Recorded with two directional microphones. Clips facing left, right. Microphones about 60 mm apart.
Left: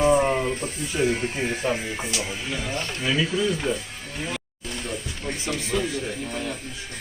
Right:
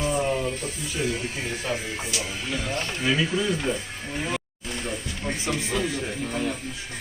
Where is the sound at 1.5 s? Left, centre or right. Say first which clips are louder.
Left 3 dB; left.